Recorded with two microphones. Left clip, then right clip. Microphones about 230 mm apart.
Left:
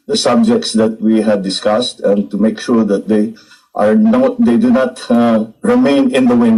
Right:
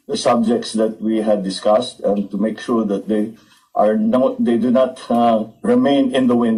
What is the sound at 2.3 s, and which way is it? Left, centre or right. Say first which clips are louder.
Speech: left 5 dB; left.